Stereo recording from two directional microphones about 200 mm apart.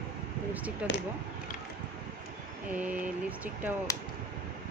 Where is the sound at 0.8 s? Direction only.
5° right (ahead or behind).